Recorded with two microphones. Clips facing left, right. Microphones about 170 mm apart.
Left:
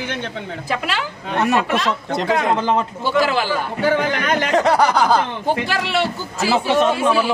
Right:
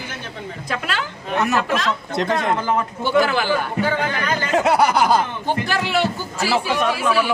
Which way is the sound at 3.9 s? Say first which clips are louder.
Left 3 dB; 80° left.